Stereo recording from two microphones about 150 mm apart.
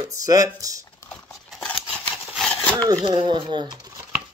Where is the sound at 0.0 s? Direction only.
25° right (ahead or behind).